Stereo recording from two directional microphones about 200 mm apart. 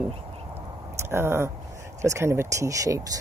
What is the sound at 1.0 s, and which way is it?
Speech, 10° right (ahead or behind).